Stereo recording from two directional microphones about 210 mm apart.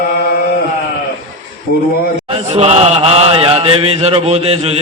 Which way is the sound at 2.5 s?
30° right (ahead or behind).